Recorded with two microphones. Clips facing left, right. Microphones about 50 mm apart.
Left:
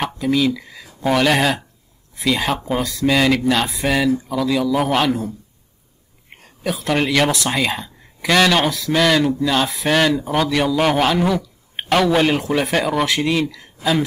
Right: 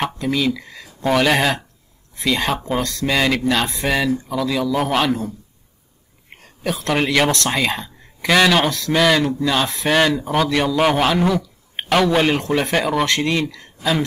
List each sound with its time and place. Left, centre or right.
0.0 s speech: centre
6.3 s speech: centre